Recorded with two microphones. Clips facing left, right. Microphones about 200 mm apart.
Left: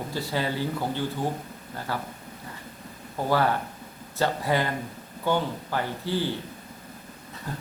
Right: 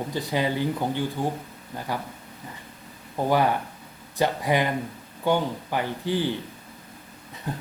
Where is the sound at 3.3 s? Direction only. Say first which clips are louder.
Right 1 dB; 15° right (ahead or behind).